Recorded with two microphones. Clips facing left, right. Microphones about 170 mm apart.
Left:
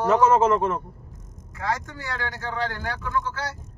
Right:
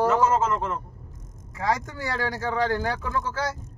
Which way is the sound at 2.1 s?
35° right (ahead or behind).